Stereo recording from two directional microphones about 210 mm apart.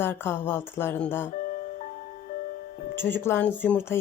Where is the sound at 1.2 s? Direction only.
40° left (ahead or behind).